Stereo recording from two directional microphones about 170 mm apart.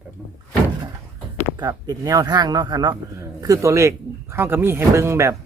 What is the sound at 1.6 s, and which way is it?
Speech, 20° right (ahead or behind).